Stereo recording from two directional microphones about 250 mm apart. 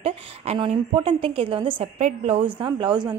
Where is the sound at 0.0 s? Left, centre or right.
Right.